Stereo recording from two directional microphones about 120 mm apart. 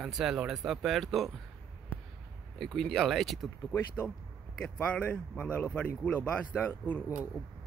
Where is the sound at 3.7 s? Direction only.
20° left (ahead or behind).